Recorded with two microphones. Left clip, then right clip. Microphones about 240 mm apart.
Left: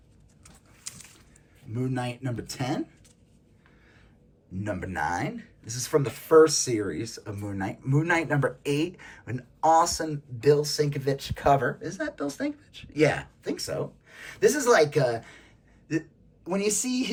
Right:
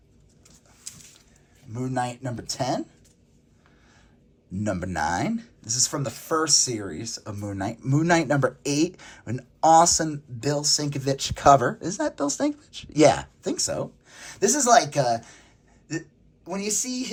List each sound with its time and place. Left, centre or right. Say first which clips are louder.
0.4 s a sound: even; left
1.7 s speech: right 4 dB; centre
4.5 s speech: right 4 dB; right
7.5 s a woman's voice: right 3 dB; right; by 17.1 s centre